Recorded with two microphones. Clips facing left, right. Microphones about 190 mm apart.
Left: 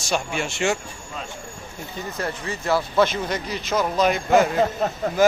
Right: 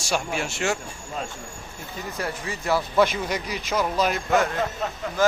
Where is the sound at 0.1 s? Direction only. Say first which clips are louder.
Left 1 dB; 5° right (ahead or behind).